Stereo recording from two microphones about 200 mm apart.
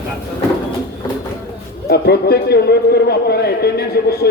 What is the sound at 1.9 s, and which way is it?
A man's voice, 50° left (ahead or behind).